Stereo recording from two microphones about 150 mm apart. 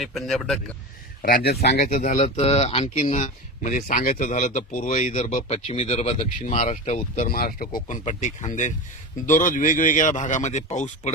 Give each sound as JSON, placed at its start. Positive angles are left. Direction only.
{"t": 0.0, "sound": "speech", "side_deg": 0}
{"t": 1.5, "sound": "speech", "side_deg": 90}
{"t": 1.8, "sound": "speech", "side_deg": 60}
{"t": 7.3, "sound": "speech", "side_deg": 80}